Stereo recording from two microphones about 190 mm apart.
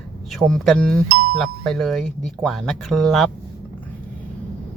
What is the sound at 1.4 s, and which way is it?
Speech, centre (ahead or behind).